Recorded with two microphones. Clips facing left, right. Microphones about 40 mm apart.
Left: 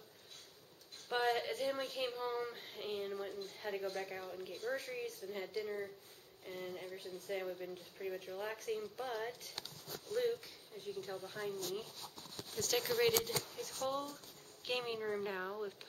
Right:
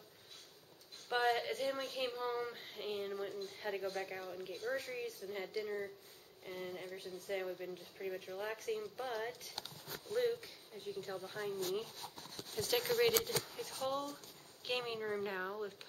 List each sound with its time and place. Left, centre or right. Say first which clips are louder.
1.0 s speech: right 1 dB; centre
12.5 s speech: right 1 dB; centre
14.6 s speech: even; centre